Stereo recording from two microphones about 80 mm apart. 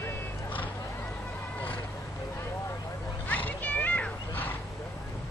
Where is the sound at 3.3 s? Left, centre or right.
Left.